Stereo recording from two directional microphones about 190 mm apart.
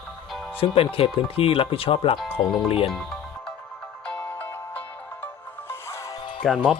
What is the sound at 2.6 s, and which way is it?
Speech, 30° left (ahead or behind).